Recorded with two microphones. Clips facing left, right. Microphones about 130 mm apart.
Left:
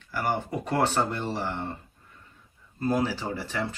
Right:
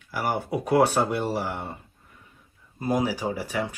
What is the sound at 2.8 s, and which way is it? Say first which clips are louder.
Speech: right 1 dB; 10° right (ahead or behind).